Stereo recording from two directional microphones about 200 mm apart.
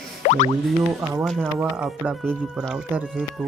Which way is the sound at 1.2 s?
5° right (ahead or behind).